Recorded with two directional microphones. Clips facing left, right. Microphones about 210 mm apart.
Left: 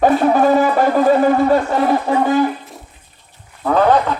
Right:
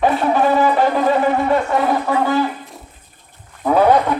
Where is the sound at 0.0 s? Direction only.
45° left (ahead or behind).